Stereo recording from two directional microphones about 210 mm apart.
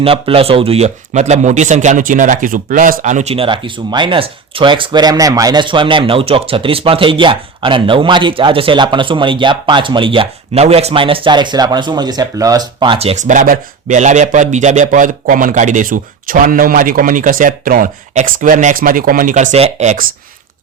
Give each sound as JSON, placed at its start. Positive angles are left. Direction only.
{"t": 0.0, "sound": "speech", "side_deg": -25}